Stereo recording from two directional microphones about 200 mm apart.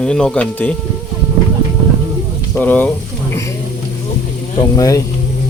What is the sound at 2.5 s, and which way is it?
Speech, 10° left (ahead or behind).